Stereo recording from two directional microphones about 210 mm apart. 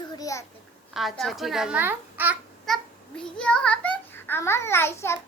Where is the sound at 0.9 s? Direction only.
Centre (ahead or behind).